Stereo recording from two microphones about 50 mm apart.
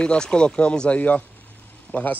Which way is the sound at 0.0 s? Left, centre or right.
Centre.